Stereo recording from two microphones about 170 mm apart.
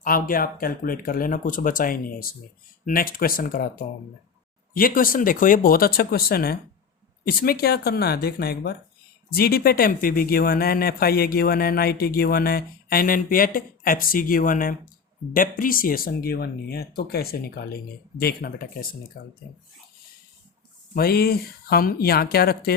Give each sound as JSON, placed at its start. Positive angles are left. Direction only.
{"t": 0.0, "sound": "speech", "side_deg": 55}
{"t": 19.2, "sound": "speech", "side_deg": 70}
{"t": 20.9, "sound": "speech", "side_deg": 65}